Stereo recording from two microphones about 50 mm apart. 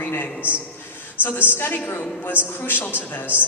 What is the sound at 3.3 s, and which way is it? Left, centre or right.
Speech, right.